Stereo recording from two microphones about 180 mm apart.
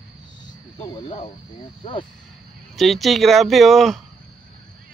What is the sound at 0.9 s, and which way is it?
Speech, 30° left (ahead or behind).